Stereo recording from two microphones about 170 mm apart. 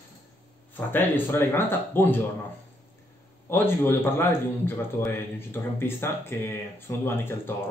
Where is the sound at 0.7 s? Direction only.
10° left (ahead or behind).